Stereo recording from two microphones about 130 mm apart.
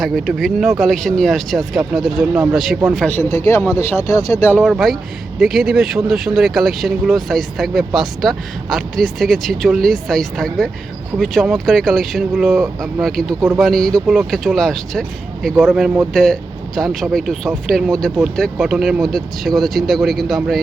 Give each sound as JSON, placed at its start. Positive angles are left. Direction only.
{"t": 0.0, "sound": "speech", "side_deg": 0}
{"t": 3.1, "sound": "speech", "side_deg": 20}
{"t": 4.6, "sound": "speech", "side_deg": 0}